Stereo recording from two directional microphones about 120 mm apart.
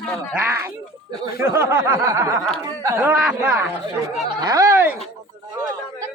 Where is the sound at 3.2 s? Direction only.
10° right (ahead or behind).